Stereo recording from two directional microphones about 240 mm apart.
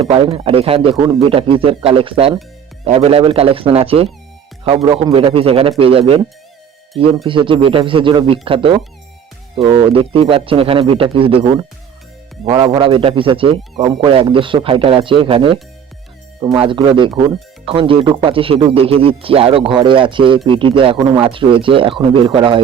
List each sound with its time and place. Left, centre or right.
0.0 s speech: right
7.3 s speech: right